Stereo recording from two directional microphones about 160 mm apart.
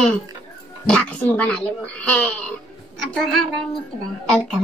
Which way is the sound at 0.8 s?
10° left (ahead or behind).